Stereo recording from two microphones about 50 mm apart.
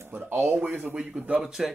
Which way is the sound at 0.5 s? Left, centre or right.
Right.